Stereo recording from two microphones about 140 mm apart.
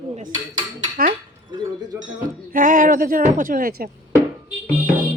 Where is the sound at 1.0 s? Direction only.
90° right.